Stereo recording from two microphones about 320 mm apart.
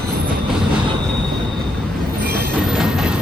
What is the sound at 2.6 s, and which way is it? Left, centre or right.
Train, centre.